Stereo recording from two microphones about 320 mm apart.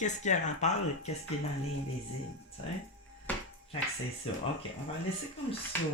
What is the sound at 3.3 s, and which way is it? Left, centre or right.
Music, centre.